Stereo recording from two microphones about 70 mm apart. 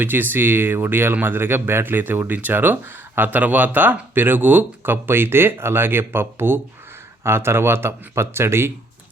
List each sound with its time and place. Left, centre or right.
0.0 s speech: right